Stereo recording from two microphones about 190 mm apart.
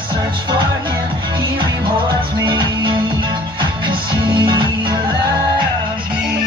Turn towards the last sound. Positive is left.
turn(degrees=-25)  # may be behind; listen again after turning